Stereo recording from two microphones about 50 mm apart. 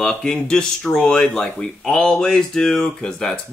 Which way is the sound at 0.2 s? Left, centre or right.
Centre.